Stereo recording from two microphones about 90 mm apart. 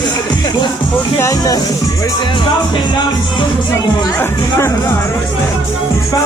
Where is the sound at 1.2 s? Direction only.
40° left (ahead or behind).